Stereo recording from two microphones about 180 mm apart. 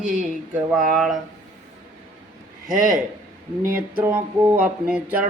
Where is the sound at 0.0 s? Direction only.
45° right (ahead or behind).